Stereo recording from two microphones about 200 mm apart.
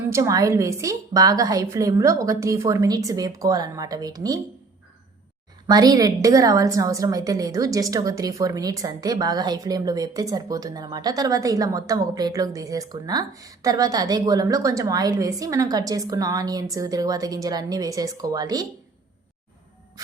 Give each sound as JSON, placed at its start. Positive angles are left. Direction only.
{"t": 0.1, "sound": "a woman's voice", "side_deg": -15}
{"t": 5.6, "sound": "a woman's voice", "side_deg": -20}